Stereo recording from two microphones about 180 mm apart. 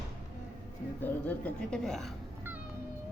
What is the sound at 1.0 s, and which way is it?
Speech, 5° left (ahead or behind).